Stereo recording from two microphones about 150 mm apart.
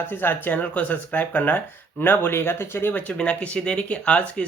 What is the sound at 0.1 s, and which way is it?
Speech, 15° left (ahead or behind).